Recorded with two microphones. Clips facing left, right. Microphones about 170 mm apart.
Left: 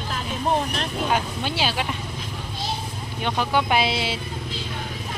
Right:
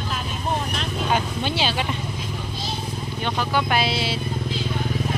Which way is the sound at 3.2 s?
20° left (ahead or behind).